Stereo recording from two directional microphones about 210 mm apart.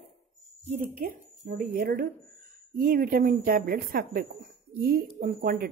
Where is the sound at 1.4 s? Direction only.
50° right (ahead or behind).